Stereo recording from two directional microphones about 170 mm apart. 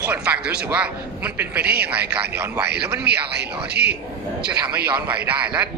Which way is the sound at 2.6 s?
70° right (ahead or behind).